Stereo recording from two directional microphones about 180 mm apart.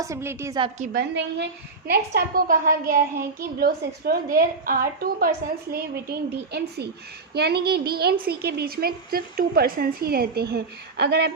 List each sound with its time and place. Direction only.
0.0 s a woman's voice: 15° right (ahead or behind)
0.9 s a woman's voice: 70° right (ahead or behind)
1.9 s a child's voice: 60° right (ahead or behind)
5.7 s a child's voice: 65° right (ahead or behind)